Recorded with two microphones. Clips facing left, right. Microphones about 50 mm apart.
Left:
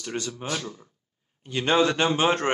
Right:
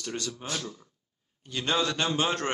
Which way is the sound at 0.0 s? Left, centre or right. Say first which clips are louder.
Left 3 dB; left.